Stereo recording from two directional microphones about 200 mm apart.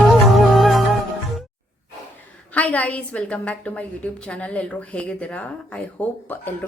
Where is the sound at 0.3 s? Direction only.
Centre (ahead or behind).